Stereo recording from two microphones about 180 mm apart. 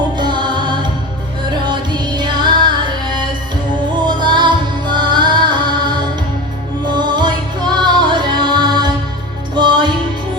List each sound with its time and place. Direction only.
0.2 s music: 25° right (ahead or behind)